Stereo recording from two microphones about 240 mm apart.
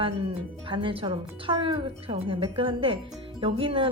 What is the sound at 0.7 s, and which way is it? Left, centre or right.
A woman's voice, right.